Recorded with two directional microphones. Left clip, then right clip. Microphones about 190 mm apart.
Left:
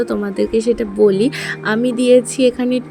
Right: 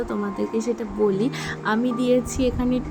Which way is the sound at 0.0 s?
25° left (ahead or behind).